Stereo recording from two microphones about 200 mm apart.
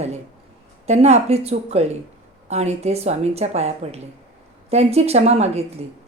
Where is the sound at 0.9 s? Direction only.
35° right (ahead or behind).